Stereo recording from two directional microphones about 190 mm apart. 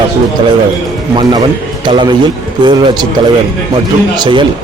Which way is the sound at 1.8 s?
25° right (ahead or behind).